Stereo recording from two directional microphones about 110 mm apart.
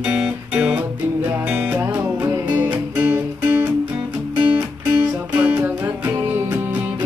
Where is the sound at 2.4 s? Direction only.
45° right (ahead or behind).